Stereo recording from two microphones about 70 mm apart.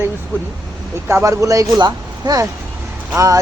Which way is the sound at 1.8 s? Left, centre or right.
Right.